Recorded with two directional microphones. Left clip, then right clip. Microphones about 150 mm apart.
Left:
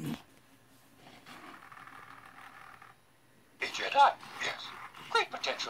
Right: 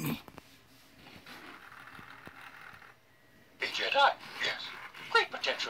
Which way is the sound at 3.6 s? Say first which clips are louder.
Left 1 dB; centre (ahead or behind).